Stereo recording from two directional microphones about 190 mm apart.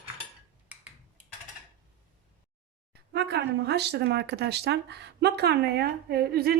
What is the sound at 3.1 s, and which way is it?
Speech, 60° right (ahead or behind).